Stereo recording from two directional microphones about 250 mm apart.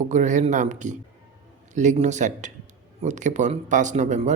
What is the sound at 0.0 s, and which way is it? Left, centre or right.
Speech, right.